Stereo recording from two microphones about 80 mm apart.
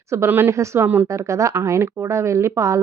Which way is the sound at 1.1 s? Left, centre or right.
Right.